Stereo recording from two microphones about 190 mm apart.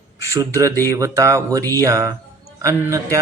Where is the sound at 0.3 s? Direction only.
15° right (ahead or behind).